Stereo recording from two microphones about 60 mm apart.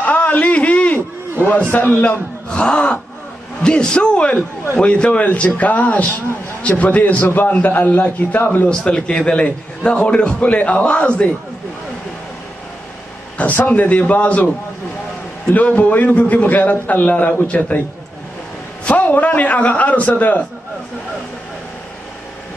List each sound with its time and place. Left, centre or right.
0.0 s a sound: left
1.4 s a man's voice: left
2.5 s gasp: centre
3.6 s a man's voice: centre; by 8.6 s left
8.6 s a man's voice: centre
13.4 s a man's voice: left
15.5 s a man's voice: left
18.9 s a man's voice: left